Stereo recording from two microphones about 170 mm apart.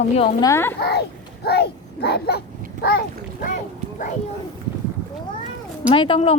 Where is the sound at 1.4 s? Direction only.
70° left (ahead or behind); by 4.1 s 50° left (ahead or behind).